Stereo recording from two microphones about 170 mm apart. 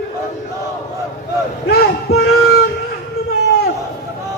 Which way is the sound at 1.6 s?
70° left (ahead or behind).